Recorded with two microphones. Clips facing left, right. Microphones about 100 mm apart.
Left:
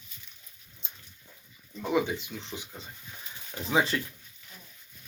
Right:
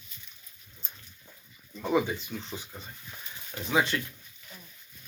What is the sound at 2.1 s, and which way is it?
Speech, 20° left (ahead or behind).